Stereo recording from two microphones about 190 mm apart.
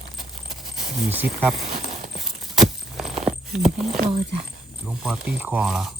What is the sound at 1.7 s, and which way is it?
Horse, 35° right (ahead or behind).